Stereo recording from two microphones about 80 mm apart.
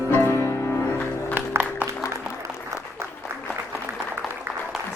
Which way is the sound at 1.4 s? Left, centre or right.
Right.